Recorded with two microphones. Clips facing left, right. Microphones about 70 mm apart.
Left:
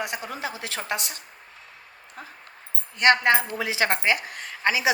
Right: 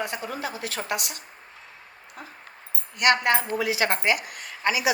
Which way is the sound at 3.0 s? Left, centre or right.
Left.